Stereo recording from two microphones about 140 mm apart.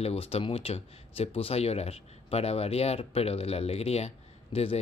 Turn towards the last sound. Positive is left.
turn(degrees=45)  # may be behind; listen again after turning